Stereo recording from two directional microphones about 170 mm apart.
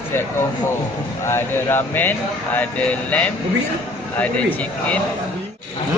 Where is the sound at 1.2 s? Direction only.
15° left (ahead or behind).